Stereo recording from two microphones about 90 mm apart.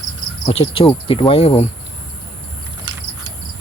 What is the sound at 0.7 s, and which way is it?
Speech, 85° left.